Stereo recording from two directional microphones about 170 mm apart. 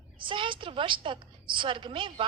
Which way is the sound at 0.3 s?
30° right (ahead or behind).